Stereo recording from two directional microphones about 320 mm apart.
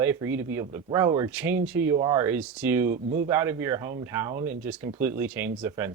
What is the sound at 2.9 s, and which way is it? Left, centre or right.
Speech, right.